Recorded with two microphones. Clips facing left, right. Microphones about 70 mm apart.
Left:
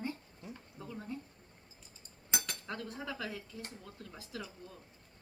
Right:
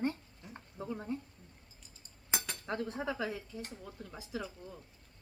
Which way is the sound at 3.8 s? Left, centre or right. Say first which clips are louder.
Right 3 dB; centre.